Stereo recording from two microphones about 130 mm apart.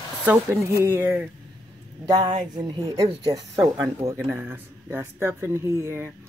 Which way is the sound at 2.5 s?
35° right (ahead or behind).